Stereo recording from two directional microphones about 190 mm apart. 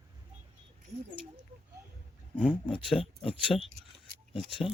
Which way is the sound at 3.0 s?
30° left (ahead or behind).